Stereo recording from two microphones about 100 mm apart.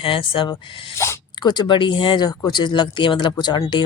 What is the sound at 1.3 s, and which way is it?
Speech, 50° left (ahead or behind).